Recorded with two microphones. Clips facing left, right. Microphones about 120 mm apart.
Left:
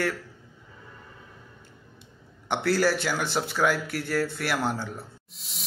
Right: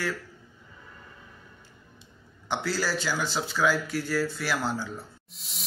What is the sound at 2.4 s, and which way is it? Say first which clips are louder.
Speech: left 5 dB; 60° left (ahead or behind).